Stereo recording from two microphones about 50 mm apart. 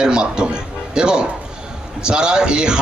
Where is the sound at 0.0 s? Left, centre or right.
Centre.